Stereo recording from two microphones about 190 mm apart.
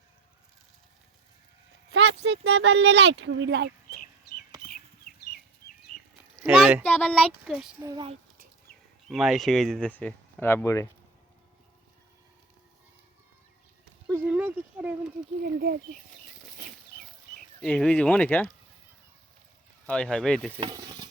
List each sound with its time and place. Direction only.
1.9 s speech: 65° right (ahead or behind)
6.3 s a sound: 5° right (ahead or behind)
6.8 s speech: 5° left (ahead or behind)
7.9 s speech: 25° right (ahead or behind)
9.0 s speech: centre (ahead or behind)
14.1 s speech: 10° right (ahead or behind)
17.6 s speech: 5° left (ahead or behind)
19.9 s speech: 5° left (ahead or behind)
20.6 s sizzle: 20° right (ahead or behind)